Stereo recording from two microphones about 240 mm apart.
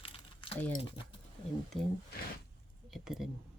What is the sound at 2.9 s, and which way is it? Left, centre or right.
Speech, centre.